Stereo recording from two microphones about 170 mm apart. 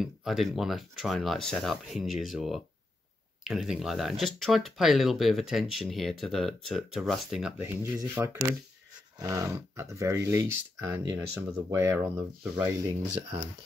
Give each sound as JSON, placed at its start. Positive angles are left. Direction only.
{"t": 0.0, "sound": "speech", "side_deg": 0}